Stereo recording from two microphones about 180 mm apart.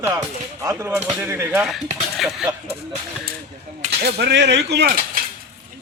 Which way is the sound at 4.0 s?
65° right (ahead or behind).